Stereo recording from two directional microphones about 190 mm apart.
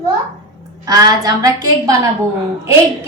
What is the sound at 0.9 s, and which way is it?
Speech, 20° right (ahead or behind).